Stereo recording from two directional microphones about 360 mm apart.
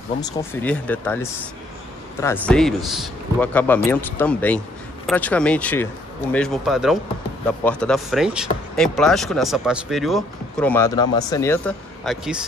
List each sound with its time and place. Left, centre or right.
0.2 s speech: centre